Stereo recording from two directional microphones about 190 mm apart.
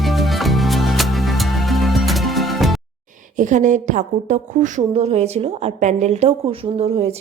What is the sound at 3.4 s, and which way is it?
A woman's voice, 40° right (ahead or behind).